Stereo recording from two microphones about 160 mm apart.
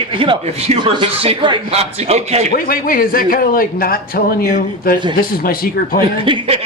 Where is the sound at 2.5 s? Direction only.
65° left (ahead or behind).